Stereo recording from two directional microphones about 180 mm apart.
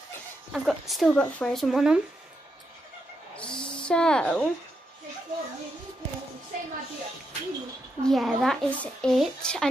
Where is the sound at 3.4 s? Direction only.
5° left (ahead or behind).